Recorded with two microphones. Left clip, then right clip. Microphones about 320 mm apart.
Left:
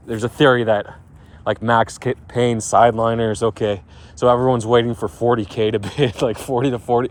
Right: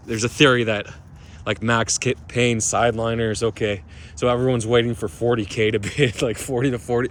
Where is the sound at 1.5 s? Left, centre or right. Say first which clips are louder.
Left 4 dB; centre.